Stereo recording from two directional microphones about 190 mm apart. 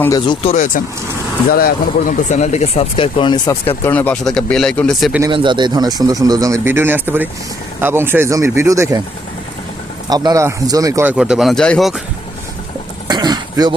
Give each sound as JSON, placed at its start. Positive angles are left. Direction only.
{"t": 0.3, "sound": "speech", "side_deg": 35}
{"t": 1.5, "sound": "speech", "side_deg": 50}
{"t": 5.2, "sound": "speech", "side_deg": -25}
{"t": 10.1, "sound": "speech", "side_deg": -20}
{"t": 11.2, "sound": "speech", "side_deg": -5}
{"t": 13.1, "sound": "throat clearing", "side_deg": -20}